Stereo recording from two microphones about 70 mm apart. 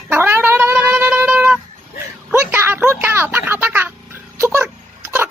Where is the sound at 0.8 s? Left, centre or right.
Right.